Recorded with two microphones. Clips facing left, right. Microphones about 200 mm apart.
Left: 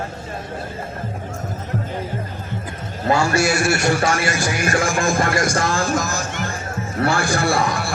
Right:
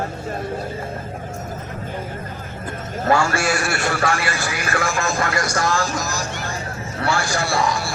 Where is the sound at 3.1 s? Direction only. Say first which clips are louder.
Left 1 dB; 20° left (ahead or behind).